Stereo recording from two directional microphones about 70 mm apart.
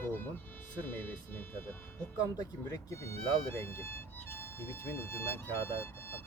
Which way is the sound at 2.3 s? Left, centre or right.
Left.